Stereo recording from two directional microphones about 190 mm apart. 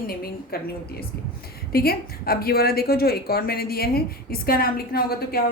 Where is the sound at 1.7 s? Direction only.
55° left (ahead or behind).